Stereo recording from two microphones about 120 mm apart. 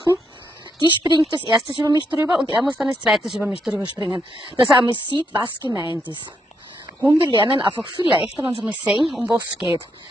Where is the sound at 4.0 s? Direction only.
40° right (ahead or behind).